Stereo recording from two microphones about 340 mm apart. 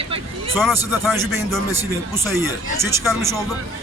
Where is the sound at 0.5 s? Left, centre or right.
Centre.